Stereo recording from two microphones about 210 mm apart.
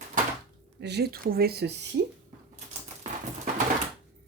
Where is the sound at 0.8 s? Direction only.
50° right (ahead or behind).